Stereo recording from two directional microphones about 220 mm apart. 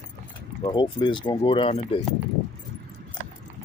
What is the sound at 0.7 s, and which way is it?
Speech, 20° left (ahead or behind).